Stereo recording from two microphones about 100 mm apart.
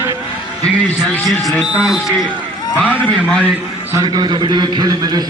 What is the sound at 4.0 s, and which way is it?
A man's voice, 45° right (ahead or behind).